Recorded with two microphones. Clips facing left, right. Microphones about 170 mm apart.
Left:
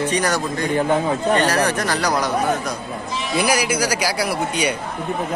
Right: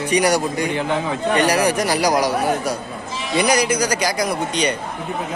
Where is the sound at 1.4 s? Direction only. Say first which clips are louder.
Right 2 dB; 10° right (ahead or behind).